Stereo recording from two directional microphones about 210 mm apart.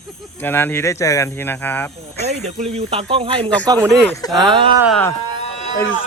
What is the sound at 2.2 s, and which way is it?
Speech, 30° right (ahead or behind).